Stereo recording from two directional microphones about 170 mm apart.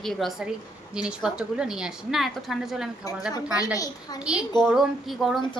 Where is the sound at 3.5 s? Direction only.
20° left (ahead or behind).